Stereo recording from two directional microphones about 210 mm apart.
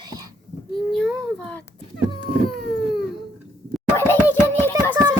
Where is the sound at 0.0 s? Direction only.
15° right (ahead or behind).